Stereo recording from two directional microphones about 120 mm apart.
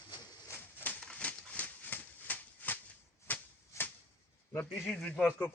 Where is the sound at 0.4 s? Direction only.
20° left (ahead or behind).